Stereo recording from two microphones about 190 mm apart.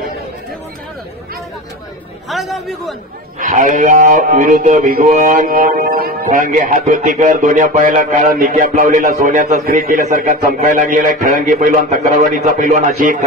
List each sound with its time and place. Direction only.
2.2 s a man's voice: centre (ahead or behind)
3.3 s speech: 45° right (ahead or behind)